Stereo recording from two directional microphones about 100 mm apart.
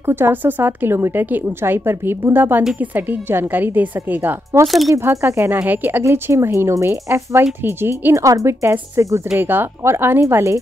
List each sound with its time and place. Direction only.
0.0 s a woman's voice: 20° right (ahead or behind)
4.6 s speech: centre (ahead or behind)
4.9 s a woman's voice: 30° right (ahead or behind)